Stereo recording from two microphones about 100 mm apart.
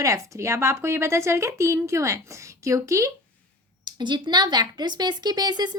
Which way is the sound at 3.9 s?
50° right (ahead or behind).